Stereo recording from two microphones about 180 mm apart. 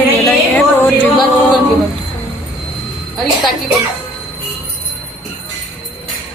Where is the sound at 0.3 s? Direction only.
10° left (ahead or behind).